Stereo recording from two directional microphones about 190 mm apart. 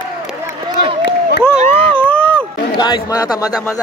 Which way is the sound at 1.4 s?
10° left (ahead or behind).